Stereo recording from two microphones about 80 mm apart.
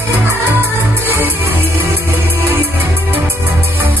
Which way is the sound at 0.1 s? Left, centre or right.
Right.